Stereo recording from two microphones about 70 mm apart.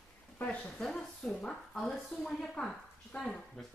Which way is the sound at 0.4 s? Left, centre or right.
Centre.